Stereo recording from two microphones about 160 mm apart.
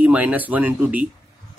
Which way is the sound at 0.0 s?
10° right (ahead or behind).